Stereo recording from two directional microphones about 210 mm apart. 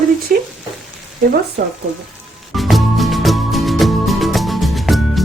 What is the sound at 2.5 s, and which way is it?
Music, centre (ahead or behind).